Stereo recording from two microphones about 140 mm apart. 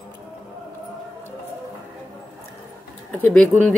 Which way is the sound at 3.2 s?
10° left (ahead or behind).